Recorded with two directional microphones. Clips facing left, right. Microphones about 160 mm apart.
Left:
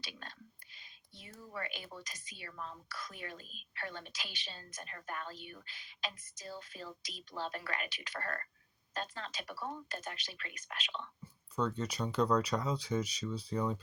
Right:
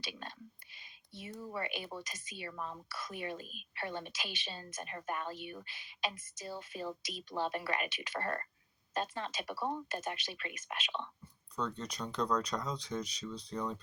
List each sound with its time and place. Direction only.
0.0 s whispering: 20° right (ahead or behind)
1.5 s a woman's voice: 25° right (ahead or behind)
11.5 s speech: 5° left (ahead or behind)